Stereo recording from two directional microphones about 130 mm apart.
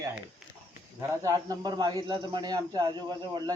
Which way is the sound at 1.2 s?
25° right (ahead or behind).